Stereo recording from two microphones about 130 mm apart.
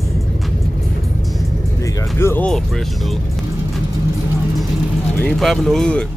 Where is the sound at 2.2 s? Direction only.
20° left (ahead or behind).